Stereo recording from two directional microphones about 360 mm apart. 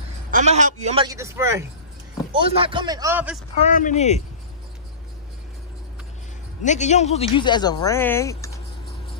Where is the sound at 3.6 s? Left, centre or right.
Left.